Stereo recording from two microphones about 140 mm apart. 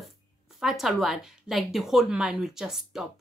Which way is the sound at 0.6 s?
Centre (ahead or behind).